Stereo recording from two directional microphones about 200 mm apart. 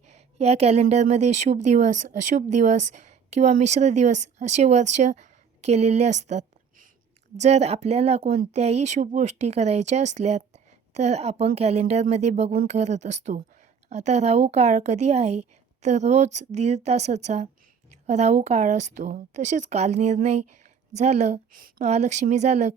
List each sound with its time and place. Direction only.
0.1 s a woman's voice: 30° right (ahead or behind)